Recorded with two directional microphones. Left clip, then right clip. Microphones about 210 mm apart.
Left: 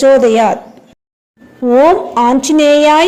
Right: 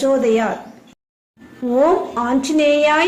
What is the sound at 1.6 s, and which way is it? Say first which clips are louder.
A woman's voice: left 7 dB; 30° left (ahead or behind).